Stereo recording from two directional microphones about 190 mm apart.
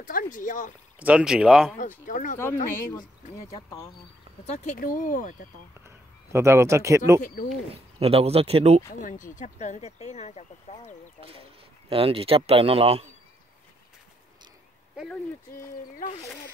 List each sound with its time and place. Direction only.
0.0 s speech: 45° left (ahead or behind)
0.9 s speech: 5° right (ahead or behind)
1.8 s speech: 45° left (ahead or behind)
2.3 s speech: 10° left (ahead or behind)
4.5 s speech: 40° left (ahead or behind)
5.9 s a sound: 15° right (ahead or behind)
7.2 s speech: 45° left (ahead or behind)
7.7 s speech: 30° right (ahead or behind)
9.0 s speech: 45° left (ahead or behind)
11.9 s speech: 30° right (ahead or behind)